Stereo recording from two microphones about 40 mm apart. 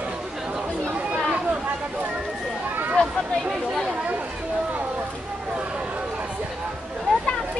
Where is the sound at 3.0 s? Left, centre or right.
Left.